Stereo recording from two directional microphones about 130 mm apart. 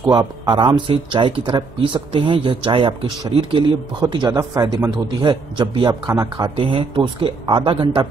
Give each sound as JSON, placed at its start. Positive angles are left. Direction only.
{"t": 0.0, "sound": "speech", "side_deg": -35}
{"t": 6.6, "sound": "speech", "side_deg": -40}